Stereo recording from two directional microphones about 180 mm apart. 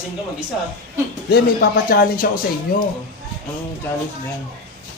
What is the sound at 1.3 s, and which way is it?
Speech, 55° left (ahead or behind).